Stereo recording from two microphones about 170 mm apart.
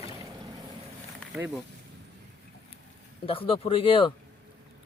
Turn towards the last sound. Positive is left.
turn(degrees=35)  # may be behind; listen again after turning